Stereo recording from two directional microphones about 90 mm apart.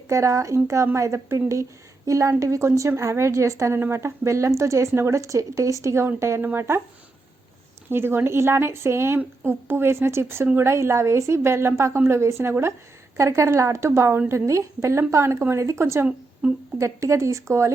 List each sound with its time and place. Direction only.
0.1 s a woman's voice: 35° right (ahead or behind)
7.9 s a woman's voice: 25° right (ahead or behind)